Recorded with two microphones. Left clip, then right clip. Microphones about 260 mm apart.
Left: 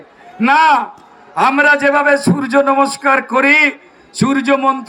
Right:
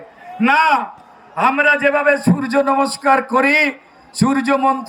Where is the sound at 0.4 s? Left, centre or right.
Left.